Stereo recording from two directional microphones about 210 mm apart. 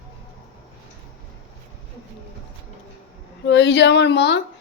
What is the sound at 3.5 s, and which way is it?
Speech, 55° left (ahead or behind).